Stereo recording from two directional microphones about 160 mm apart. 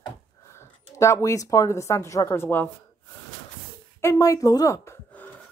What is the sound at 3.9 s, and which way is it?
Speech, 20° left (ahead or behind).